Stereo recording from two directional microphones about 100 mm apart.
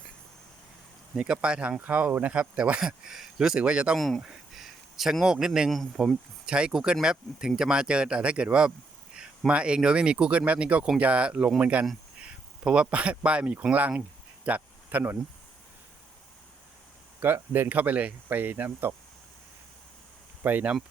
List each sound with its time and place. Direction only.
1.1 s speech: 10° right (ahead or behind)
6.4 s speech: 10° right (ahead or behind)
14.4 s a sound: 15° right (ahead or behind)
17.2 s speech: 20° right (ahead or behind)
20.4 s speech: 15° right (ahead or behind)